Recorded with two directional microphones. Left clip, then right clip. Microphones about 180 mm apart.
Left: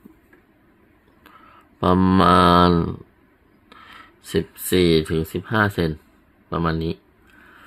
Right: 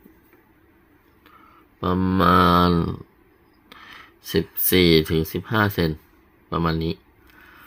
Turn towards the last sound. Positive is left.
turn(degrees=0)  # may be behind; listen again after turning